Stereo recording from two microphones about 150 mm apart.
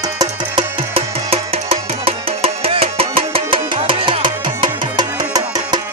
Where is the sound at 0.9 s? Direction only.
40° right (ahead or behind).